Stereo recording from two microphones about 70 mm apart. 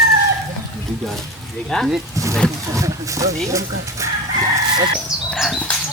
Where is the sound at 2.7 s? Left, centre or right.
Right.